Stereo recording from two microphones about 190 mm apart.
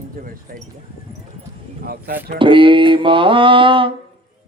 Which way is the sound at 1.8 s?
55° right (ahead or behind).